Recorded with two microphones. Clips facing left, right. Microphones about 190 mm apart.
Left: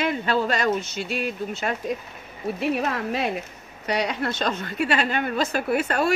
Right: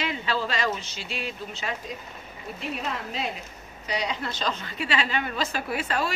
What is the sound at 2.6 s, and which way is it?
A woman's voice, 60° left (ahead or behind).